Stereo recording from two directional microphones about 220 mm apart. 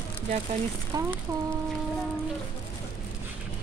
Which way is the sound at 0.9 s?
20° right (ahead or behind).